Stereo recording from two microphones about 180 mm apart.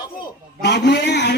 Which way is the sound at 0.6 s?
70° left (ahead or behind).